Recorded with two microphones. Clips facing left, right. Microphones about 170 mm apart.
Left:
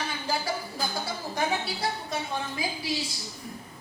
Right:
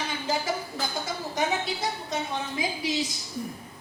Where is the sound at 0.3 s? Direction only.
20° right (ahead or behind).